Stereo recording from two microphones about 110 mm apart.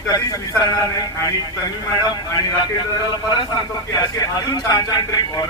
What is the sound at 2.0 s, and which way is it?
A man's voice, 40° left (ahead or behind).